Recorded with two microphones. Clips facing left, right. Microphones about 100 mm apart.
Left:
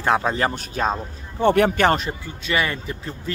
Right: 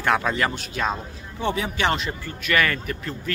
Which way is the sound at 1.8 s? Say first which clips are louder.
Left 5 dB; 45° left (ahead or behind).